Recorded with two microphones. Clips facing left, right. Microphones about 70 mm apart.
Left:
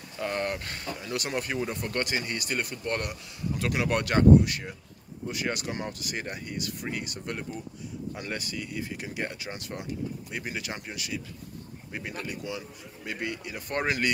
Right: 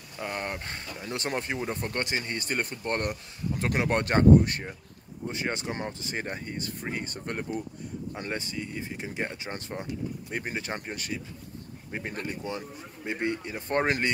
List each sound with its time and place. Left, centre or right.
0.2 s speech: centre
0.7 s speech: right
8.1 s speech: right